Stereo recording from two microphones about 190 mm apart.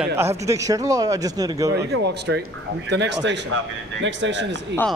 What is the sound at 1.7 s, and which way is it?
Speech, 60° right (ahead or behind).